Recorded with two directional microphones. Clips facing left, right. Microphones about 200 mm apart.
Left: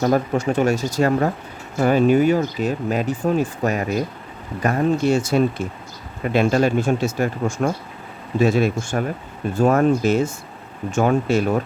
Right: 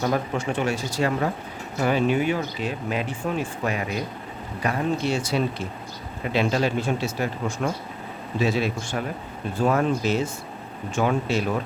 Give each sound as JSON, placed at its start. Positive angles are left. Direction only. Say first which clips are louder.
{"t": 0.0, "sound": "speech", "louder": "left 6 dB", "side_deg": 40}